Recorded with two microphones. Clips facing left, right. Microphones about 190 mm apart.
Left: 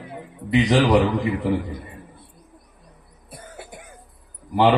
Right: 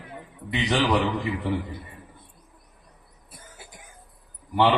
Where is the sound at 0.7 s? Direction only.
35° left (ahead or behind).